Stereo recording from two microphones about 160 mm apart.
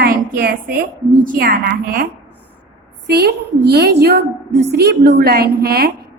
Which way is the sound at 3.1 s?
90° right.